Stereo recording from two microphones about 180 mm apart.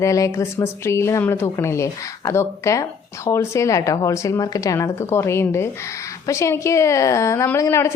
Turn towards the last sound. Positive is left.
turn(degrees=15)  # may be behind; listen again after turning